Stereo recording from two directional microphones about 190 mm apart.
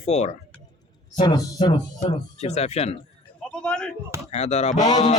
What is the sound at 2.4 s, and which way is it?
Speech, 35° left (ahead or behind).